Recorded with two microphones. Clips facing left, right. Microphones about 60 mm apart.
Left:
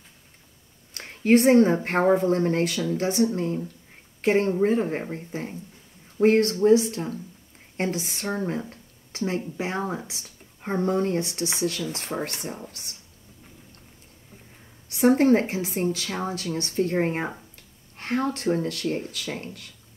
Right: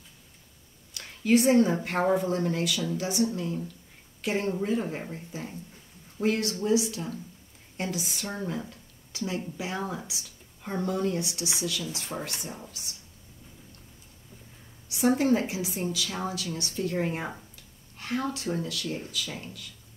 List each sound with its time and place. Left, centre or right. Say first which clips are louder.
0.9 s speech: left 4 dB; left
14.9 s speech: left 5 dB; left